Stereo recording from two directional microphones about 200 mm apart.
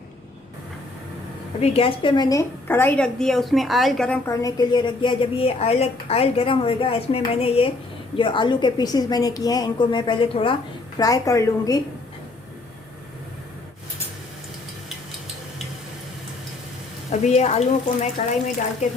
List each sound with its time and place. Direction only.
1.6 s a woman's voice: 30° left (ahead or behind); by 4.2 s 5° left (ahead or behind)
4.3 s a woman's voice: 15° left (ahead or behind)
17.1 s speech: 35° left (ahead or behind)